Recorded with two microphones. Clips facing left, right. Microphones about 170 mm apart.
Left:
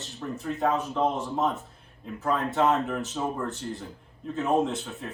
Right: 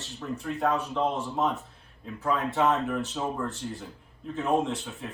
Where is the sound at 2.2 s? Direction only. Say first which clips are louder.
Left 1 dB; centre (ahead or behind).